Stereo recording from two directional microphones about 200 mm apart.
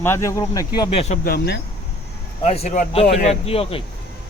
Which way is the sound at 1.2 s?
50° left (ahead or behind).